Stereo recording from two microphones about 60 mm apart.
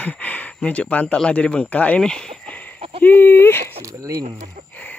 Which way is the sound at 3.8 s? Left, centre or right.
Right.